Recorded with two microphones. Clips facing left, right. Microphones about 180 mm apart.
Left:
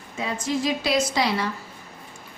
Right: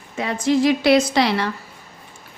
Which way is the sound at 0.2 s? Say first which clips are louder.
Right 7 dB; 70° right (ahead or behind).